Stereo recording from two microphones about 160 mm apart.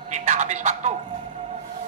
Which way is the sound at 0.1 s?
50° right (ahead or behind).